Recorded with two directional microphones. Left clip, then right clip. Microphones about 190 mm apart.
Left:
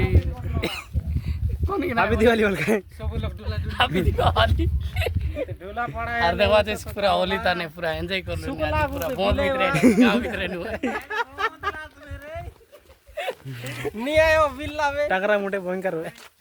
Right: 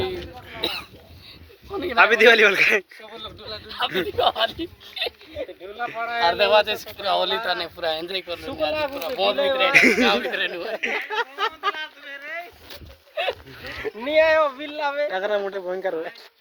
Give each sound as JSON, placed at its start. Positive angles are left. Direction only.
{"t": 1.8, "sound": "speech", "side_deg": 0}
{"t": 4.6, "sound": "speech", "side_deg": 30}
{"t": 5.4, "sound": "speech", "side_deg": 10}
{"t": 11.1, "sound": "speech", "side_deg": -15}
{"t": 13.2, "sound": "a sound", "side_deg": -45}
{"t": 13.7, "sound": "speech", "side_deg": 65}
{"t": 15.1, "sound": "speech", "side_deg": 5}